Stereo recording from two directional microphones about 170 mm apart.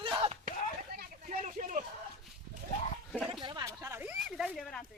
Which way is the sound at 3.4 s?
25° right (ahead or behind).